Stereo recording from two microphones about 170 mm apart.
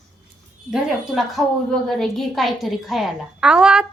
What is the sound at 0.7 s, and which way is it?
A woman's voice, centre (ahead or behind).